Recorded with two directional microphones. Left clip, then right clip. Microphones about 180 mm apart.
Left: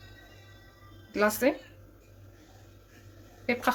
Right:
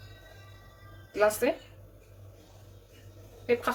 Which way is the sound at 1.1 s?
55° left (ahead or behind).